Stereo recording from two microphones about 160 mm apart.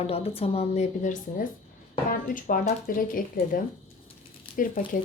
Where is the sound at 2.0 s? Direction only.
60° left (ahead or behind).